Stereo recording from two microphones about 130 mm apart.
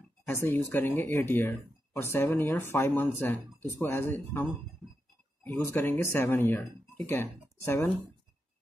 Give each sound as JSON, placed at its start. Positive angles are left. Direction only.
{"t": 0.3, "sound": "speech", "side_deg": 15}